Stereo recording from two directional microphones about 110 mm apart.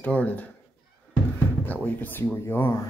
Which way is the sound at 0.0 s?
15° left (ahead or behind).